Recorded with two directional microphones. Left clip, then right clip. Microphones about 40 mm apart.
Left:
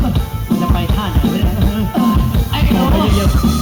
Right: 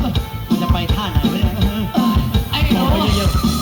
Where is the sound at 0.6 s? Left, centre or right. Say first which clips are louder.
Left 2 dB; right.